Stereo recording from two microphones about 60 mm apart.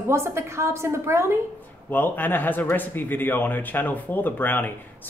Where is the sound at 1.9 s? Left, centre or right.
Left.